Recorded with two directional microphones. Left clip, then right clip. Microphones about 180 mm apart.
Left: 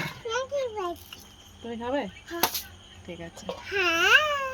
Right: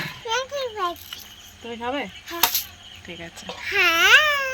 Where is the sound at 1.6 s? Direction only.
Centre (ahead or behind).